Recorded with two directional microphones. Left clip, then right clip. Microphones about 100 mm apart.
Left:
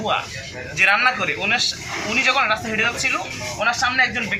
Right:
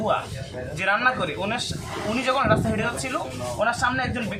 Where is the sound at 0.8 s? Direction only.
20° right (ahead or behind).